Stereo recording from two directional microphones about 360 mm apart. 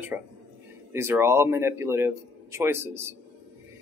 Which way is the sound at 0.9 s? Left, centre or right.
Centre.